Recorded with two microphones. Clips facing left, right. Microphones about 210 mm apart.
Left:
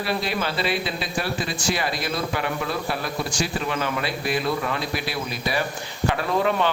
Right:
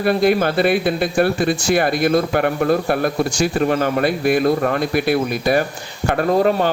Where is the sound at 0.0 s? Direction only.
55° right (ahead or behind).